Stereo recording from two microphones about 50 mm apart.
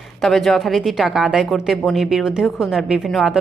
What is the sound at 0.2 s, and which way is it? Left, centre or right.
A woman's voice, centre.